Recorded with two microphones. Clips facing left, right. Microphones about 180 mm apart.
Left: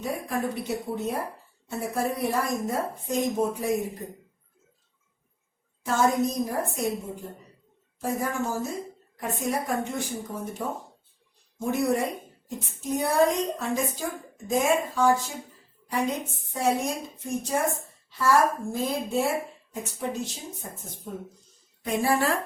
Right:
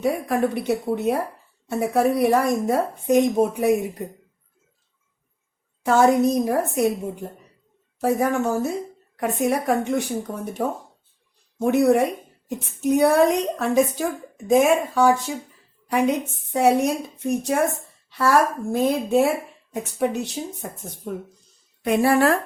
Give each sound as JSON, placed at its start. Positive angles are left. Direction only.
{"t": 0.0, "sound": "a woman's voice", "side_deg": -70}
{"t": 5.8, "sound": "a woman's voice", "side_deg": -70}
{"t": 8.0, "sound": "a woman's voice", "side_deg": -70}
{"t": 11.6, "sound": "a woman's voice", "side_deg": -70}